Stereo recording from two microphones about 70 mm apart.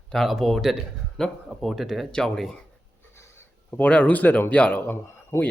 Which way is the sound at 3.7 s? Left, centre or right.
Centre.